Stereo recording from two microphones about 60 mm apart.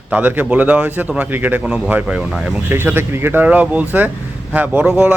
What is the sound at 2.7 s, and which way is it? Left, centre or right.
Speech, right.